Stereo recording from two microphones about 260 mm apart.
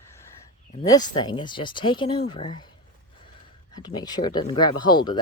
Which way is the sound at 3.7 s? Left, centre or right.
Centre.